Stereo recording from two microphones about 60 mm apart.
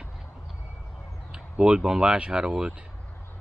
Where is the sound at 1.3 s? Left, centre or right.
Centre.